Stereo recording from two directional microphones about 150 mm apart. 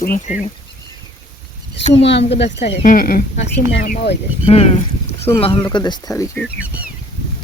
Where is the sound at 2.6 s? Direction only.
70° left (ahead or behind).